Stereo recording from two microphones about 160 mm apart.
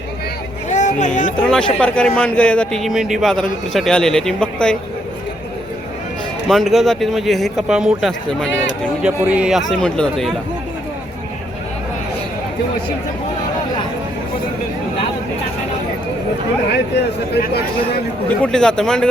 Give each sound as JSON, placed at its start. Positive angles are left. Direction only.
{"t": 0.7, "sound": "a sound", "side_deg": 50}
{"t": 1.4, "sound": "a man's voice", "side_deg": 5}
{"t": 6.5, "sound": "a man's voice", "side_deg": 0}
{"t": 17.3, "sound": "speech", "side_deg": 85}
{"t": 18.3, "sound": "a man's voice", "side_deg": 5}